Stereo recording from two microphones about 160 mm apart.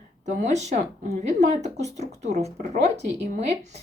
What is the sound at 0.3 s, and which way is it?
A woman's voice, 45° right (ahead or behind).